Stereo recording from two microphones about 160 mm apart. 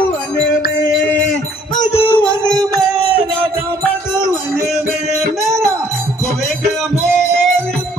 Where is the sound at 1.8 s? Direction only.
15° left (ahead or behind).